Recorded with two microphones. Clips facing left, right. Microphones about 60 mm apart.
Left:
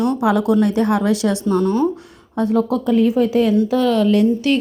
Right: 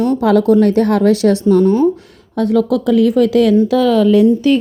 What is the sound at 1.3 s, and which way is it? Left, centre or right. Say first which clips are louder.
Speech: right 6 dB; left.